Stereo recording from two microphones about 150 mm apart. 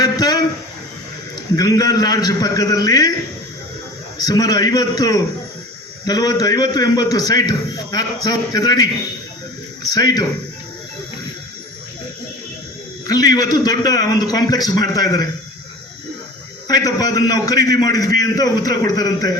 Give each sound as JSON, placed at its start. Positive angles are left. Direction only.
{"t": 0.0, "sound": "a sound", "side_deg": 25}
{"t": 1.5, "sound": "a man's voice", "side_deg": 25}
{"t": 4.2, "sound": "a man's voice", "side_deg": 25}
{"t": 13.1, "sound": "a man's voice", "side_deg": 25}
{"t": 16.6, "sound": "a man's voice", "side_deg": 25}